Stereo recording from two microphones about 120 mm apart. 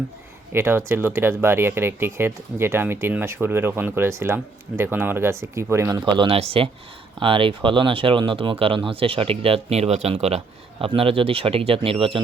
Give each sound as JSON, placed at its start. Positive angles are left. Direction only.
{"t": 0.5, "sound": "speech", "side_deg": -20}
{"t": 6.1, "sound": "speech", "side_deg": -45}